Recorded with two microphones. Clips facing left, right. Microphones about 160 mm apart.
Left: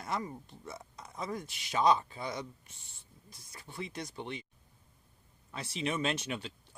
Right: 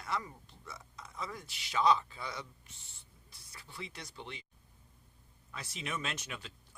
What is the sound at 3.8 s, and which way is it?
Speech, 50° left (ahead or behind).